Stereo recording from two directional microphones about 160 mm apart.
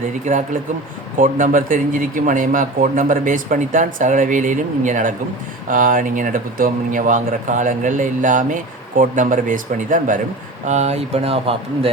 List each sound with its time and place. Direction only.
0.3 s speech: 50° right (ahead or behind)